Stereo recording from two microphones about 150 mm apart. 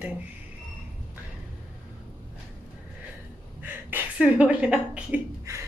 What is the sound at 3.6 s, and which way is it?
Speech, 10° right (ahead or behind).